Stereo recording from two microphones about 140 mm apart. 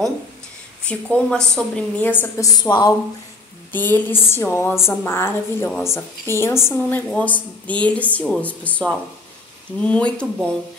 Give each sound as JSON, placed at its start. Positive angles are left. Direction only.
{"t": 0.8, "sound": "a woman's voice", "side_deg": 5}
{"t": 2.4, "sound": "speech", "side_deg": 25}
{"t": 3.7, "sound": "a woman's voice", "side_deg": 15}